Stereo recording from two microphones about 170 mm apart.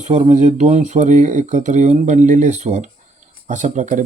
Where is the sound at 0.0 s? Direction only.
45° right (ahead or behind).